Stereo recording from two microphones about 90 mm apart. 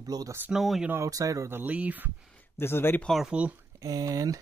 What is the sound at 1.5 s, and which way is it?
Speech, 20° right (ahead or behind).